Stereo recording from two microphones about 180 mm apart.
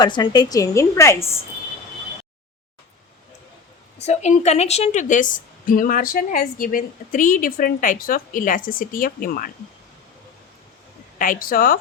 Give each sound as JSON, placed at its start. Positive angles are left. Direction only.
{"t": 0.0, "sound": "a woman's voice", "side_deg": 25}
{"t": 4.0, "sound": "a woman's voice", "side_deg": 40}
{"t": 11.2, "sound": "a woman's voice", "side_deg": 50}